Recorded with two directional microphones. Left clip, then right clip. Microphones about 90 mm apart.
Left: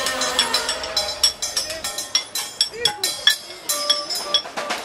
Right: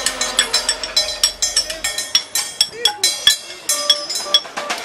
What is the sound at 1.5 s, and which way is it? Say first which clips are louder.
Music: right 5 dB; 40° right (ahead or behind).